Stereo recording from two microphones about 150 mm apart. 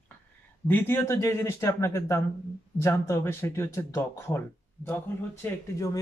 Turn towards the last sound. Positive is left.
turn(degrees=15)  # may be behind; listen again after turning